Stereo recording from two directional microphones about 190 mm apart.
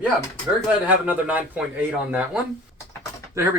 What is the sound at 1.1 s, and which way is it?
Speech, 10° right (ahead or behind).